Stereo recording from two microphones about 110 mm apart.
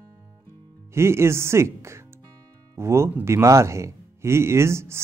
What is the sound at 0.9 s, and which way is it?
Speech, 25° right (ahead or behind).